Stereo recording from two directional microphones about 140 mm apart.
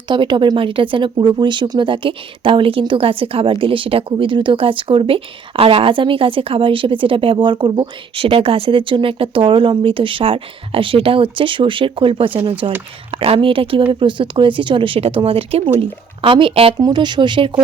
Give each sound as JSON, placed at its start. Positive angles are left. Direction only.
{"t": 0.1, "sound": "speech", "side_deg": -35}